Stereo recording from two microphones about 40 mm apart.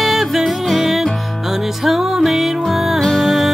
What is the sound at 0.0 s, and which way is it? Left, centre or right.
Music, centre.